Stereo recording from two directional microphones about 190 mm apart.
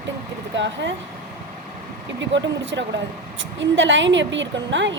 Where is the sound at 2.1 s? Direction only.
70° right (ahead or behind).